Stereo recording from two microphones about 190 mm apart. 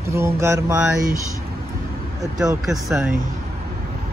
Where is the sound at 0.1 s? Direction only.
15° right (ahead or behind).